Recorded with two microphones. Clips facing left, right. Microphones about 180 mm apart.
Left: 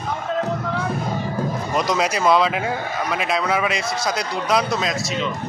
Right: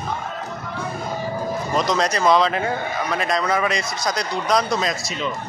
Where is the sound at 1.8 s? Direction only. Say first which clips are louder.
Even; 10° left (ahead or behind).